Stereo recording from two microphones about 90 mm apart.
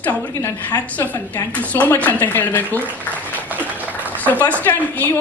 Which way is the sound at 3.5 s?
20° right (ahead or behind).